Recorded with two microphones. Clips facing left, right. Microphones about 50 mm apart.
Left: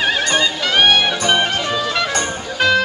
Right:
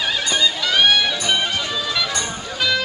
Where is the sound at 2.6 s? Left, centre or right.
Left.